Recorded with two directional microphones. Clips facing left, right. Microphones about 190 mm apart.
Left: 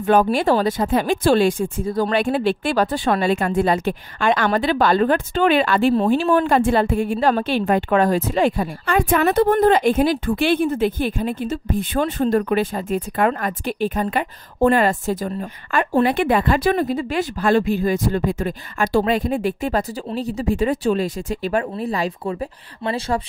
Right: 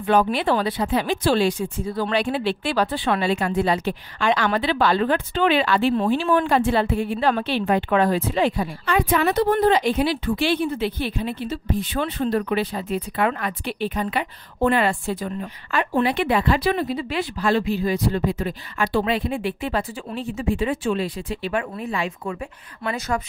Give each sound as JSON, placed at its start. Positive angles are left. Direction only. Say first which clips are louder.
{"t": 0.0, "sound": "speech", "louder": "left 3 dB", "side_deg": 45}